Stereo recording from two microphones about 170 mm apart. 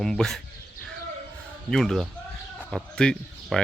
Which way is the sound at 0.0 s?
5° left (ahead or behind).